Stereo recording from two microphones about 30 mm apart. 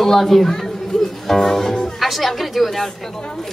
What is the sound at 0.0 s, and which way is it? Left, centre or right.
A woman's voice, centre.